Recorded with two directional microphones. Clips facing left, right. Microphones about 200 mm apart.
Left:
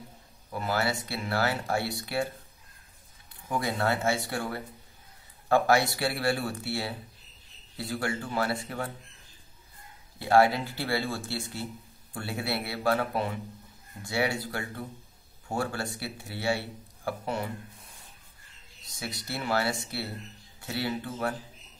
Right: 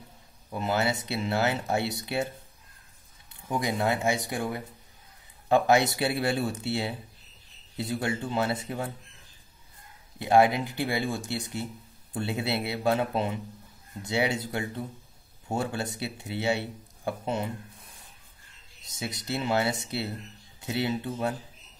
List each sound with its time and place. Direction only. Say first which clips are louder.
0.5 s speech: right 2 dB; 20° right (ahead or behind)
3.4 s speech: right 1 dB; 15° right (ahead or behind)
10.1 s speech: right 1 dB; 20° right (ahead or behind)
18.9 s speech: right 4 dB; 20° right (ahead or behind)